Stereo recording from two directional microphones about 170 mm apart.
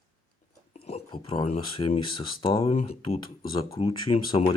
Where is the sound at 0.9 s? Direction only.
35° left (ahead or behind).